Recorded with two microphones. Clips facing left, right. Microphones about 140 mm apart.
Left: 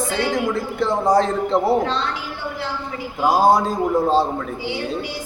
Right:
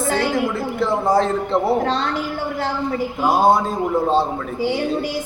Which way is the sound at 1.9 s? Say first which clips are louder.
Right 3 dB; 45° right (ahead or behind).